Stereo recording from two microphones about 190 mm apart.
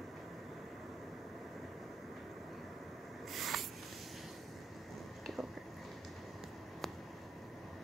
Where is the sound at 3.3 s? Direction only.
Centre (ahead or behind).